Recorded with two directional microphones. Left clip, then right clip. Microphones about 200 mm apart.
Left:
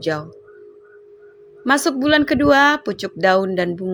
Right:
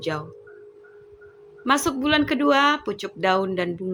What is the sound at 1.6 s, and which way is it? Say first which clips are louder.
Speech: left 4 dB; 25° left (ahead or behind).